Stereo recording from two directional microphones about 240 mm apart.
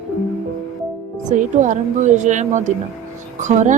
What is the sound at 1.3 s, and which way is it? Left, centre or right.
Speech, right.